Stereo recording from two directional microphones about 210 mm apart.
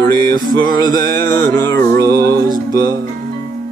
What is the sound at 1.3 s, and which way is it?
Music, 45° right (ahead or behind).